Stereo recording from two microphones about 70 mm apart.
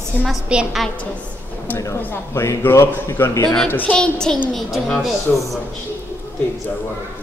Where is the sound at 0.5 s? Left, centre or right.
Centre.